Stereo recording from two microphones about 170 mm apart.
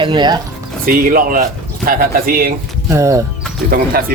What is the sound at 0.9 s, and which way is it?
Speech, 55° right (ahead or behind).